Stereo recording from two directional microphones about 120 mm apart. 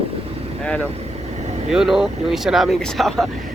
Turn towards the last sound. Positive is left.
turn(degrees=0)  # may be behind; listen again after turning